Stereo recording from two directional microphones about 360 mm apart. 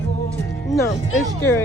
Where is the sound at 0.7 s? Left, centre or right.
Centre.